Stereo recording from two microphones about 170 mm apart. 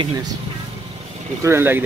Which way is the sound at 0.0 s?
25° right (ahead or behind).